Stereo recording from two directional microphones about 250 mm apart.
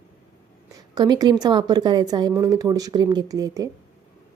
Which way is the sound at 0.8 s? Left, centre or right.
Centre.